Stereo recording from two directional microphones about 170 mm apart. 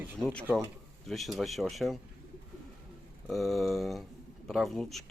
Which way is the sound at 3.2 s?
Centre (ahead or behind).